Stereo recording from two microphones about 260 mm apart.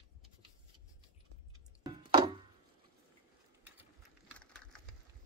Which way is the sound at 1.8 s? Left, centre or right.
Centre.